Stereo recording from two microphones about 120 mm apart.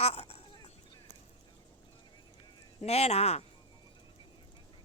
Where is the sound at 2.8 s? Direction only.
60° left (ahead or behind).